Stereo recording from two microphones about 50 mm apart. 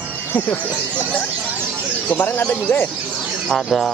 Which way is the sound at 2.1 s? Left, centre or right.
Left.